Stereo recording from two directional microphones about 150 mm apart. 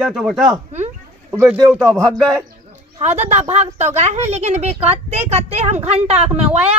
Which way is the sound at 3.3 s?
50° right (ahead or behind).